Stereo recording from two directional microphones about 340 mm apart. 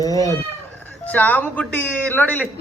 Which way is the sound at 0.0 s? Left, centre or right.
Centre.